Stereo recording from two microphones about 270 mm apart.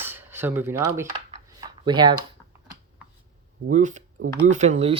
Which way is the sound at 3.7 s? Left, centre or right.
Right.